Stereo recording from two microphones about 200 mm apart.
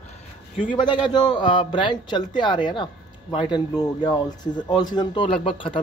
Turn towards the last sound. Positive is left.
turn(degrees=25)  # may be behind; listen again after turning